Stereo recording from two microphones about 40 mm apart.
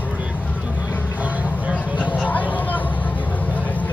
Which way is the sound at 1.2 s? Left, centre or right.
Right.